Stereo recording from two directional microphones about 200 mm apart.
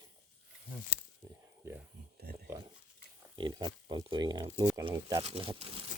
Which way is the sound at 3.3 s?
20° right (ahead or behind).